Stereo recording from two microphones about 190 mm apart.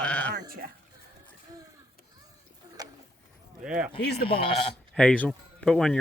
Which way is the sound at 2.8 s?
20° right (ahead or behind).